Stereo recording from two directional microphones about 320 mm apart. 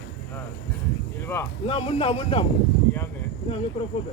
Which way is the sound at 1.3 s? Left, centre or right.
Centre.